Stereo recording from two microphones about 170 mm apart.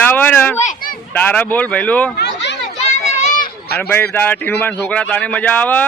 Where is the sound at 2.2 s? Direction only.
90° left.